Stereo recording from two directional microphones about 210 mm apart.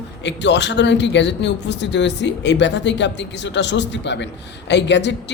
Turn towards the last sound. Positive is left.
turn(degrees=55)  # may be behind; listen again after turning